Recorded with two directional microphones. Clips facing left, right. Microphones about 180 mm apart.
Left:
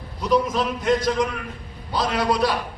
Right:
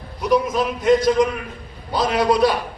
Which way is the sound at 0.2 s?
15° right (ahead or behind).